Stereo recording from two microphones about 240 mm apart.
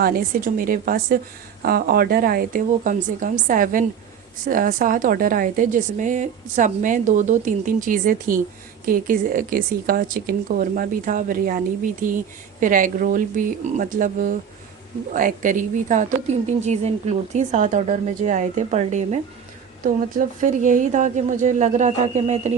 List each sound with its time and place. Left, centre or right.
0.0 s speech: right